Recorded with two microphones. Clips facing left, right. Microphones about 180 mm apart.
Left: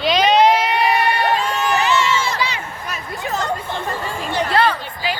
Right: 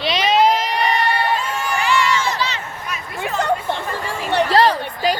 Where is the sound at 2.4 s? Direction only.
10° left (ahead or behind).